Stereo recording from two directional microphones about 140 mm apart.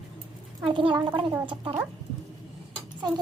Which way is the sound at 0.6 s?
35° right (ahead or behind).